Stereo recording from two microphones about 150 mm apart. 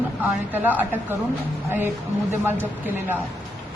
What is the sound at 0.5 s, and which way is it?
Speech, 10° right (ahead or behind).